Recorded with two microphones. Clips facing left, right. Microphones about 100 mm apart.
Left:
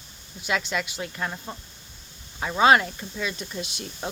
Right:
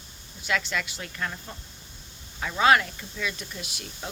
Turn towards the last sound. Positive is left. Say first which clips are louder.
# left 5 dB
turn(degrees=25)  # may be behind; listen again after turning